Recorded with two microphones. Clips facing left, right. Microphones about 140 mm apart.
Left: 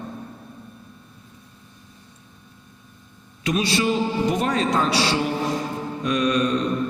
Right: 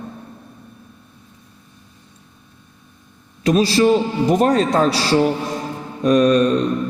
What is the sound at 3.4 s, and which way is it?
A man's voice, 35° right (ahead or behind).